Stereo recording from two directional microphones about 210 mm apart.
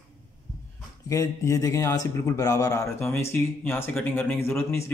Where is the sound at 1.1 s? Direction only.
15° left (ahead or behind).